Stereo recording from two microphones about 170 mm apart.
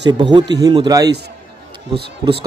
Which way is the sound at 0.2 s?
25° right (ahead or behind).